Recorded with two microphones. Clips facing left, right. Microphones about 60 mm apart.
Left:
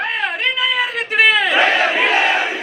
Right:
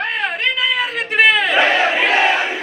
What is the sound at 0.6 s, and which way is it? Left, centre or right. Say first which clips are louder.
Crowd: even; centre.